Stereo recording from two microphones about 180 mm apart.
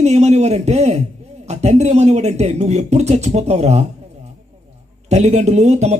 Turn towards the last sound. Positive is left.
turn(degrees=-40)  # may be behind; listen again after turning